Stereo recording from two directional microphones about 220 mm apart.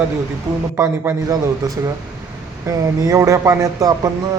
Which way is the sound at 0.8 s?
15° right (ahead or behind).